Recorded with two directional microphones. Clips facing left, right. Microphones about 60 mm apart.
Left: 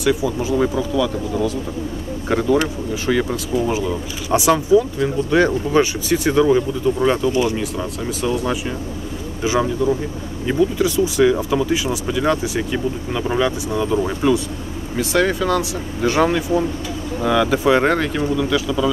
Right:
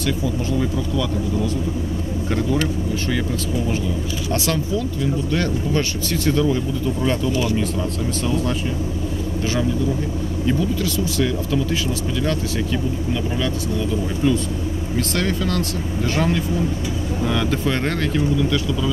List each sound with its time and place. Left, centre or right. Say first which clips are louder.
0.0 s speech: left 4 dB; centre
6.4 s speech: left 5 dB; left
9.4 s speech: left 4 dB; centre